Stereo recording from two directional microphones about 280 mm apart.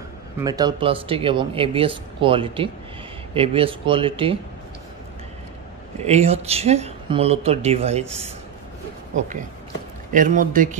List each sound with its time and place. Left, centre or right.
0.4 s speech: centre
5.9 s speech: right
10.1 s speech: right